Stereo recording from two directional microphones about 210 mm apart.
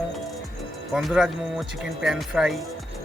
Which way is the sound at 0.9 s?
Centre (ahead or behind).